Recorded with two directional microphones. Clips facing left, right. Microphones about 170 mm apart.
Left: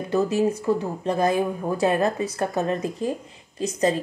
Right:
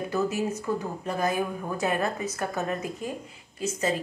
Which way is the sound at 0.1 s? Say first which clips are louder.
Left 8 dB; 35° left (ahead or behind).